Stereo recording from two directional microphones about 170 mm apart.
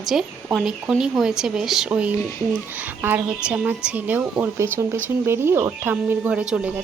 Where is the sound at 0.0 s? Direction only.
Centre (ahead or behind).